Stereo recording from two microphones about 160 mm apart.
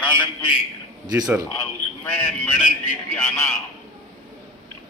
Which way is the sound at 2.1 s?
10° left (ahead or behind).